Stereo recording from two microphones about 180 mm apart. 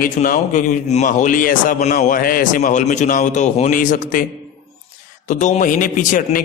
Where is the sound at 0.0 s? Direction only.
50° left (ahead or behind).